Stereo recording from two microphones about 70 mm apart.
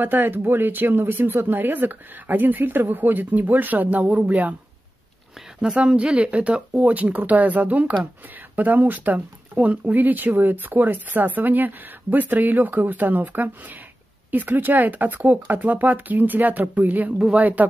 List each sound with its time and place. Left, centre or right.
0.0 s speech: right
5.6 s speech: centre